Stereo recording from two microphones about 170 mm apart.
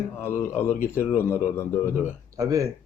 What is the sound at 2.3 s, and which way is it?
Speech, 20° right (ahead or behind).